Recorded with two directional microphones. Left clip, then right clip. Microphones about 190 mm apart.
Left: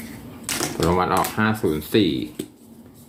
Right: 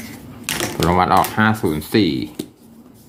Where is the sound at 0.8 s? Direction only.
35° right (ahead or behind).